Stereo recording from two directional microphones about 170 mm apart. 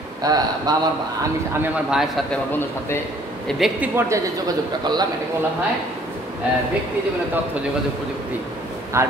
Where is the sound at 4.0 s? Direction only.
20° right (ahead or behind).